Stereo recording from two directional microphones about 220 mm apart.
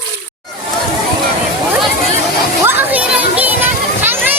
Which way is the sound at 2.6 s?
10° right (ahead or behind).